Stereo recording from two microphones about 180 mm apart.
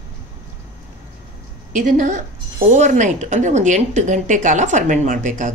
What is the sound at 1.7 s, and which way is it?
A woman's voice, 45° right (ahead or behind).